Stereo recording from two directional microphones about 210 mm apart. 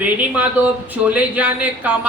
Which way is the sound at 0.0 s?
5° right (ahead or behind).